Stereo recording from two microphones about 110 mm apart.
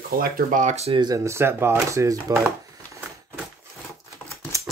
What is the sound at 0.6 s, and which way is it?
Speech, 80° right.